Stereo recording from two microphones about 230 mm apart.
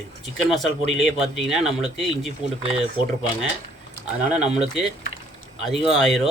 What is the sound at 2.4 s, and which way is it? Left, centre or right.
Speech, right.